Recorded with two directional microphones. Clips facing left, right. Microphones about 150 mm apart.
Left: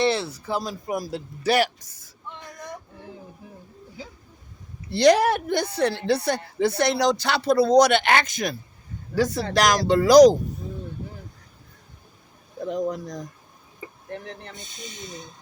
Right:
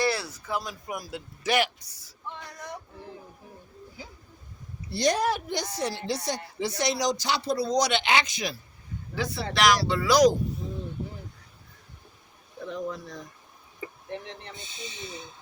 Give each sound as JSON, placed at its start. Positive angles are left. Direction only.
{"t": 0.0, "sound": "speech", "side_deg": 25}
{"t": 1.9, "sound": "a sound", "side_deg": 50}
{"t": 4.9, "sound": "a woman's voice", "side_deg": 75}
{"t": 12.5, "sound": "speech", "side_deg": 40}